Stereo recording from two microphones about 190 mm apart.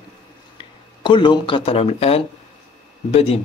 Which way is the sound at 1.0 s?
25° left (ahead or behind).